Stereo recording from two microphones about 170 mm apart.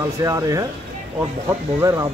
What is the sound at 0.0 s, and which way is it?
A man's voice, 20° right (ahead or behind).